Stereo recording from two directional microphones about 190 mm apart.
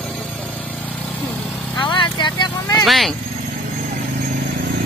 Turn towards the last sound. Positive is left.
turn(degrees=0)  # may be behind; listen again after turning